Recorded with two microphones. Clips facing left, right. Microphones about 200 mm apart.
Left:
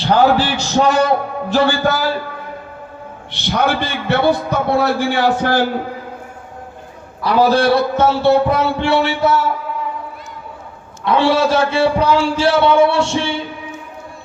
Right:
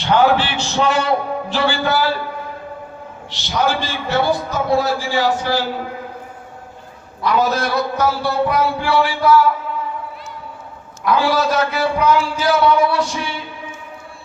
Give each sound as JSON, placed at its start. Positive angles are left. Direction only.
{"t": 0.0, "sound": "a man's voice", "side_deg": 35}
{"t": 3.3, "sound": "a man's voice", "side_deg": 60}
{"t": 7.3, "sound": "a man's voice", "side_deg": 30}
{"t": 11.0, "sound": "a man's voice", "side_deg": 25}